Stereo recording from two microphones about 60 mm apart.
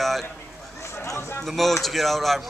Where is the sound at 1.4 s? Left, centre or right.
Centre.